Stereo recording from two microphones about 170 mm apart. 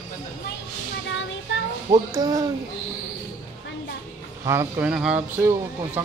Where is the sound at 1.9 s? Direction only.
20° right (ahead or behind).